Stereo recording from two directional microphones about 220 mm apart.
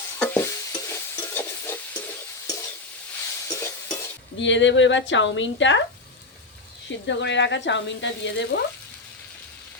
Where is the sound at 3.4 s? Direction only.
10° left (ahead or behind).